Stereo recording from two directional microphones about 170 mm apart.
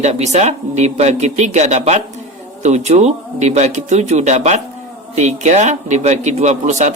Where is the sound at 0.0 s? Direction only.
40° right (ahead or behind).